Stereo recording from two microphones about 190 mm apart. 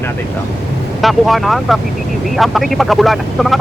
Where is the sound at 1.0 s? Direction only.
Centre (ahead or behind).